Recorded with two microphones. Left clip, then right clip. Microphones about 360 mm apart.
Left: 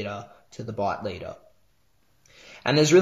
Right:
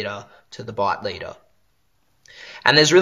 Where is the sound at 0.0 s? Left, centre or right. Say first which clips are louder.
Right 5 dB; right.